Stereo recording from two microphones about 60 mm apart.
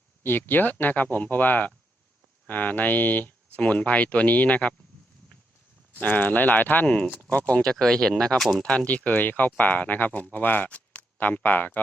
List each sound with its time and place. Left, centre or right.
0.2 s speech: left
6.0 s speech: left
7.6 s speech: centre
8.7 s speech: left